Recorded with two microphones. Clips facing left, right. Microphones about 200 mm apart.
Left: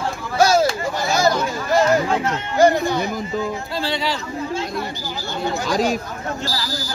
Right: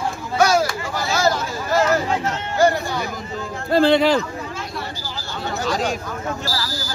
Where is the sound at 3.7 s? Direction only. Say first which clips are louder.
Right 9 dB; 55° right (ahead or behind).